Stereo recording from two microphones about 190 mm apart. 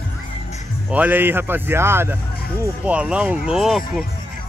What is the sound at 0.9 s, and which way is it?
Speech, 10° right (ahead or behind).